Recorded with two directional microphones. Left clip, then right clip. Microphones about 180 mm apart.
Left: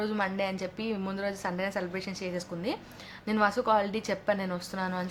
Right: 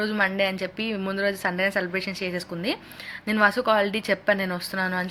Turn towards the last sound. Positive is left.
turn(degrees=-10)  # may be behind; listen again after turning